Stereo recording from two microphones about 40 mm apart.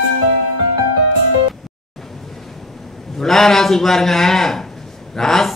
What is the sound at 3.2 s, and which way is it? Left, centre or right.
A man's voice, centre.